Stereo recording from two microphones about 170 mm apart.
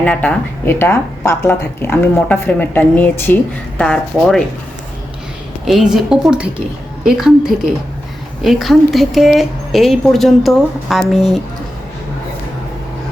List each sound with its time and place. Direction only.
0.0 s a woman's voice: 5° left (ahead or behind)
5.6 s a woman's voice: centre (ahead or behind)